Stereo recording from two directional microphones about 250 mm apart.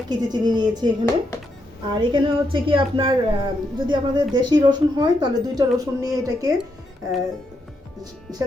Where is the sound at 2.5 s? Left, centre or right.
Right.